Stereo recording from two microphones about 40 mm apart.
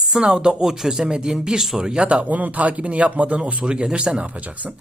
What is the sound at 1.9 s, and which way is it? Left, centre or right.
Speech, right.